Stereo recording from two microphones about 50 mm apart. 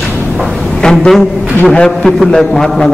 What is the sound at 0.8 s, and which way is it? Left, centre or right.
A man's voice, centre.